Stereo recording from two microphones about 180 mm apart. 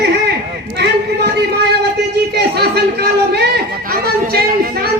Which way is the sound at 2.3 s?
65° right (ahead or behind).